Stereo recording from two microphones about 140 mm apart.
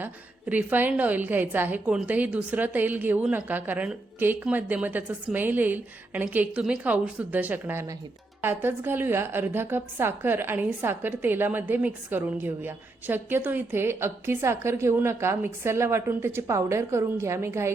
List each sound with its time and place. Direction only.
0.0 s a woman's voice: 10° right (ahead or behind)